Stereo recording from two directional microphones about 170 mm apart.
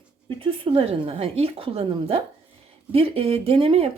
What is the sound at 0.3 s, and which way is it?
Speech, 30° right (ahead or behind).